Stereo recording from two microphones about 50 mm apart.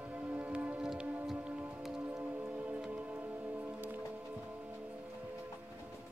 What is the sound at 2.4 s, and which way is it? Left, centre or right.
Music, right.